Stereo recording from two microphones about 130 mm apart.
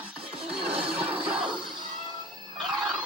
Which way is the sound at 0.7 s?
45° right (ahead or behind).